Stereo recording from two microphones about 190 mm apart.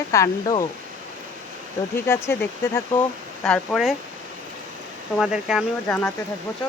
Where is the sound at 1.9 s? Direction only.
15° left (ahead or behind).